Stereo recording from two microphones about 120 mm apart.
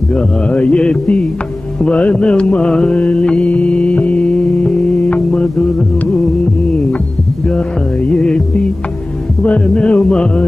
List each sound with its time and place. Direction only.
0.1 s mantra: 10° left (ahead or behind)
1.8 s music: 10° left (ahead or behind)
7.4 s music: 10° left (ahead or behind)
9.4 s mantra: 10° left (ahead or behind)